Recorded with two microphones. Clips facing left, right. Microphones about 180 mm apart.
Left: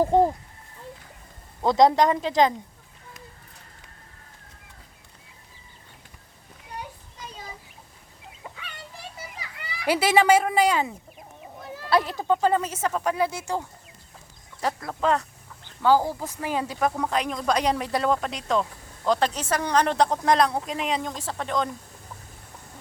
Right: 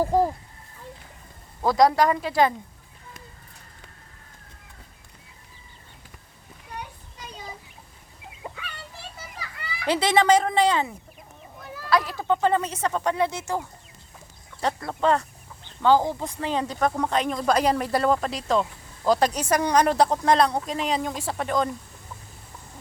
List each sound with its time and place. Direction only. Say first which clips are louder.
0.0 s speech: left 2 dB; 20° left (ahead or behind)
1.6 s speech: left 1 dB; 25° left (ahead or behind)
9.8 s speech: left 1 dB; 10° left (ahead or behind)
11.6 s a sound: left 1 dB; 30° left (ahead or behind)
12.1 s speech: even; 10° left (ahead or behind)
14.6 s a woman's voice: right 2 dB; centre (ahead or behind)